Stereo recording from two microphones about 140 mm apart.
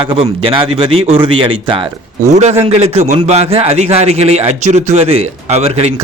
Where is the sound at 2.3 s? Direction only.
50° right (ahead or behind).